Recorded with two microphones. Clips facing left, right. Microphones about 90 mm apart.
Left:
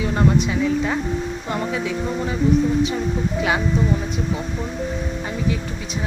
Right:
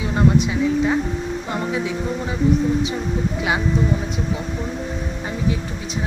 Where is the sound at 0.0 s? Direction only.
20° right (ahead or behind).